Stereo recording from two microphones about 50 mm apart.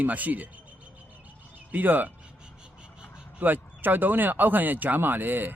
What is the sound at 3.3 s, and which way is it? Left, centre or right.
Speech, right.